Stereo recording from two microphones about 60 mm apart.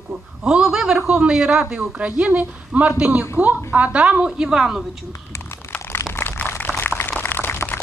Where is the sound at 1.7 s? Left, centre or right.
Right.